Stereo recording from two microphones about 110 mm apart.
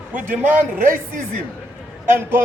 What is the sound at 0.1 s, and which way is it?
Speech, 15° right (ahead or behind).